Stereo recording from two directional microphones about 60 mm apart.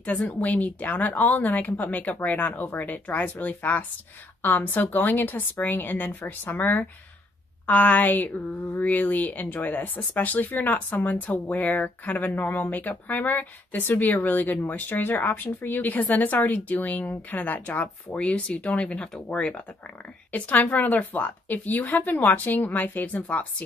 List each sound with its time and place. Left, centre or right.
0.0 s a woman's voice: left